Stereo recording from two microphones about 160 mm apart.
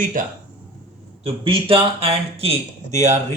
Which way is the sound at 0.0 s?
60° right (ahead or behind).